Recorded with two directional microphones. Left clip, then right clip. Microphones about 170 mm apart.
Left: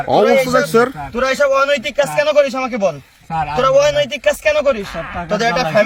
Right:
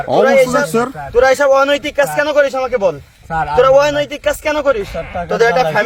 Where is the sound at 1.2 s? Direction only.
45° right (ahead or behind).